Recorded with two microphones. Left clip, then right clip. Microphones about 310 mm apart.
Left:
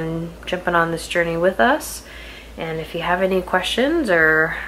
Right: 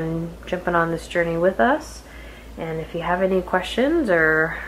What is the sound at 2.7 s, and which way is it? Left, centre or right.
Speech, centre.